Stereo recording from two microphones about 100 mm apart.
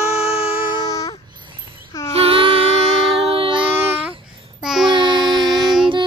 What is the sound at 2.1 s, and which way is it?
Child singing, 65° right (ahead or behind).